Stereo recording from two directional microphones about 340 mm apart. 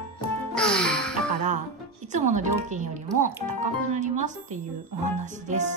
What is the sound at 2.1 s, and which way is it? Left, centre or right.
Speech, right.